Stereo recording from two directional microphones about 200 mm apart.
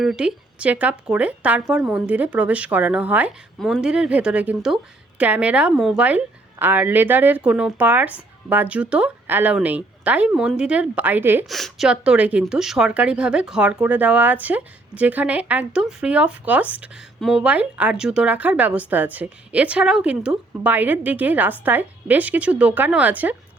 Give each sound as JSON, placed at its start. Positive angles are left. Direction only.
{"t": 0.0, "sound": "a woman's voice", "side_deg": -5}
{"t": 11.4, "sound": "a woman's voice", "side_deg": 0}